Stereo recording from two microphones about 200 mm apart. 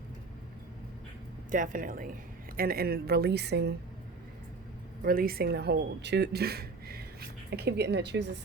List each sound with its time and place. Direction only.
1.5 s speech: 40° right (ahead or behind); by 3.8 s 55° right (ahead or behind)
5.0 s speech: 45° right (ahead or behind)